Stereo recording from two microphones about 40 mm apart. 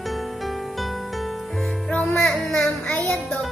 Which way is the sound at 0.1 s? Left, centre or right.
Centre.